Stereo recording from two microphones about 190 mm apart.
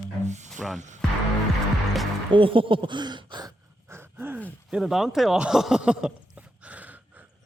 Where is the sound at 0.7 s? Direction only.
40° right (ahead or behind).